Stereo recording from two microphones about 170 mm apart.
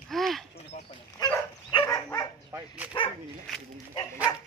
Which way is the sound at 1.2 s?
30° left (ahead or behind).